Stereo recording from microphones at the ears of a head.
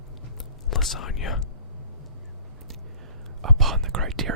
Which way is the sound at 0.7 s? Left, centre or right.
Left.